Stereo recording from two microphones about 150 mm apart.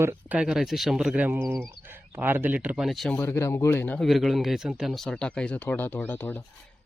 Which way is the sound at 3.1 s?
15° left (ahead or behind).